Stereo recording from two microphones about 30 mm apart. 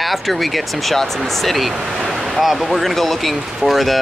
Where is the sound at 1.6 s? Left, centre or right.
Centre.